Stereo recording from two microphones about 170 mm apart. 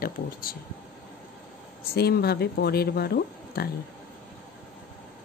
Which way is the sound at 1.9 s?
65° left (ahead or behind).